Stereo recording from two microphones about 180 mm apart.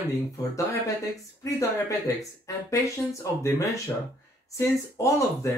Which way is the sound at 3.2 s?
15° left (ahead or behind).